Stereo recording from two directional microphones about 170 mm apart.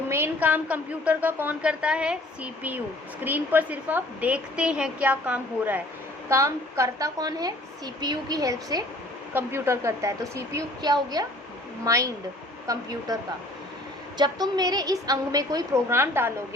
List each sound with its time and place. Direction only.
0.1 s a woman's voice: 10° right (ahead or behind)
14.2 s a woman's voice: 25° right (ahead or behind)